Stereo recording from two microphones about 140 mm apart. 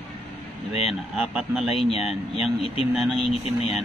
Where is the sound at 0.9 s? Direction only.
Centre (ahead or behind).